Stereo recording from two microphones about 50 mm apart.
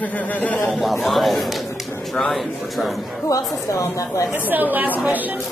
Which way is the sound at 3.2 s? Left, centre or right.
Left.